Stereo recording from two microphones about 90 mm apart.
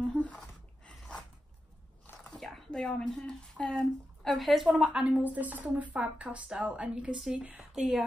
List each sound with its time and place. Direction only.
0.0 s a sound: 10° left (ahead or behind)
2.2 s speech: 5° left (ahead or behind)
4.8 s speech: 10° right (ahead or behind)